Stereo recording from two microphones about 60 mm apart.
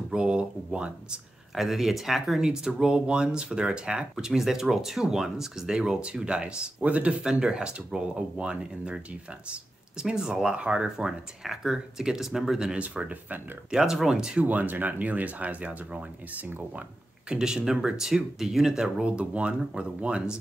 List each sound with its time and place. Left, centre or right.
0.1 s speech: centre
1.5 s speech: centre
12.8 s speech: right
13.7 s speech: centre
14.4 s speech: right
17.3 s speech: centre